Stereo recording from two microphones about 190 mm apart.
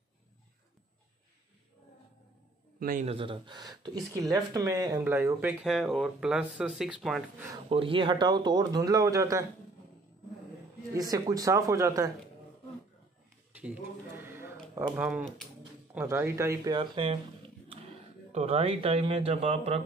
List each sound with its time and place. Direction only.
2.8 s a man's voice: 45° right (ahead or behind)
3.1 s speech: 25° right (ahead or behind); by 7.4 s centre (ahead or behind)
7.7 s speech: 25° right (ahead or behind)
11.0 s speech: 20° right (ahead or behind)
13.6 s a sound: 10° right (ahead or behind)
15.9 s speech: 10° right (ahead or behind); by 17.2 s 30° right (ahead or behind)
18.3 s speech: 30° right (ahead or behind)